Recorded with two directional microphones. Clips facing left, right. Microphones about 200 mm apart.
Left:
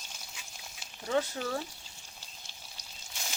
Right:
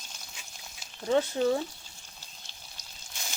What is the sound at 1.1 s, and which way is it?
Speech, 20° right (ahead or behind).